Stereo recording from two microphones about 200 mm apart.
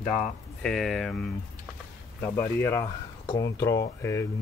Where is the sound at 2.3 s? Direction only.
10° left (ahead or behind).